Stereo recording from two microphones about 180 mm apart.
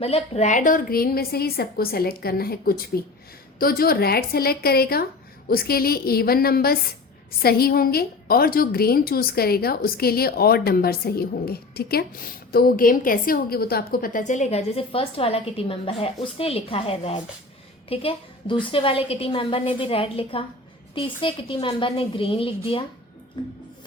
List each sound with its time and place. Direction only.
0.0 s a woman's voice: 35° left (ahead or behind)